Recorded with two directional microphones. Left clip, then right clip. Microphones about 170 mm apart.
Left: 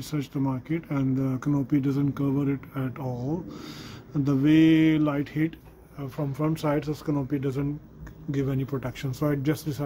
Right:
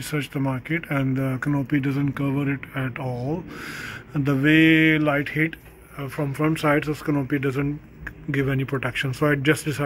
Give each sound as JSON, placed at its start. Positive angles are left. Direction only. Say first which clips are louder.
{"t": 0.1, "sound": "speech", "louder": "right 3 dB", "side_deg": 0}
{"t": 3.1, "sound": "speech", "louder": "right 2 dB", "side_deg": -15}
{"t": 4.3, "sound": "speech", "louder": "right 3 dB", "side_deg": 0}